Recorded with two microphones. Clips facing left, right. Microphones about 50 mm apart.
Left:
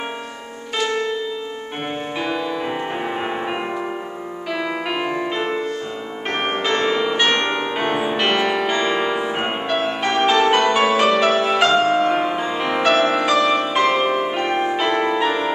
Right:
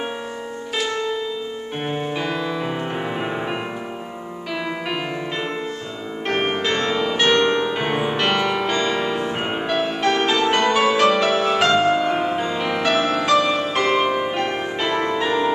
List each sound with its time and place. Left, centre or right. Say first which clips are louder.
2.1 s music: left 1 dB; centre
4.8 s music: left 3 dB; centre
7.8 s music: left 1 dB; centre